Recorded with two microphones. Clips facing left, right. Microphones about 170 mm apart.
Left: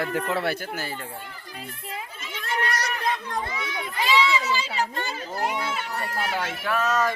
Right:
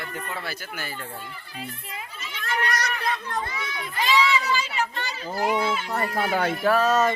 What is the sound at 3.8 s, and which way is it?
Crowd, 10° left (ahead or behind).